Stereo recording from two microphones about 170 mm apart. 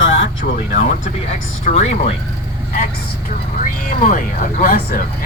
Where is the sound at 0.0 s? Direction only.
90° left.